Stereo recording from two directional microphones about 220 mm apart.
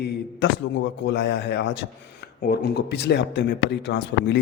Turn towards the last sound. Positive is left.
turn(degrees=50)  # may be behind; listen again after turning